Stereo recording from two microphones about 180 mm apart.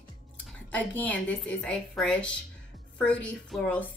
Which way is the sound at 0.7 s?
10° left (ahead or behind).